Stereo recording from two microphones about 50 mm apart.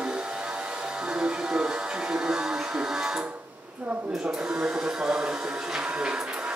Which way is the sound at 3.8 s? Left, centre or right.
Right.